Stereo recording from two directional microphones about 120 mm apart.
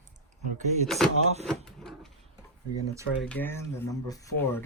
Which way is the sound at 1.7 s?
5° left (ahead or behind).